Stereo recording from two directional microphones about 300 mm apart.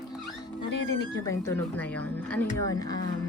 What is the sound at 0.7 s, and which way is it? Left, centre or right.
Speech, left.